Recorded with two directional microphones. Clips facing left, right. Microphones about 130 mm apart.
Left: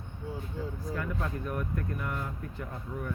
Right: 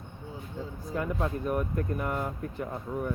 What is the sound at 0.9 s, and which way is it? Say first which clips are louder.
Speech: right 7 dB; 20° right (ahead or behind).